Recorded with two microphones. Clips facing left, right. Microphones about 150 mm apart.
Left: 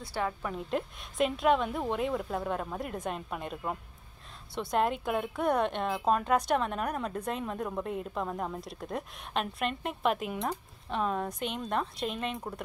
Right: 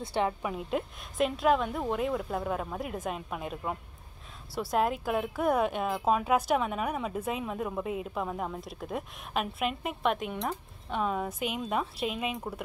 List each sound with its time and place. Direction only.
0.0 s a woman's voice: 20° right (ahead or behind)
0.5 s a woman's voice: 5° right (ahead or behind)